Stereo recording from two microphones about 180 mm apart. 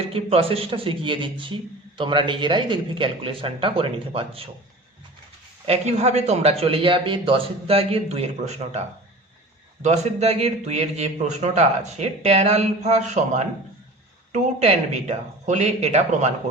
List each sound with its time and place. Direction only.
0.1 s speech: 30° right (ahead or behind)
5.6 s a man's voice: 35° right (ahead or behind)
9.8 s a man's voice: 40° right (ahead or behind)